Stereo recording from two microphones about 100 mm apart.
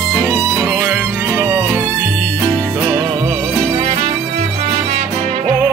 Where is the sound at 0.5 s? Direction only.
15° right (ahead or behind).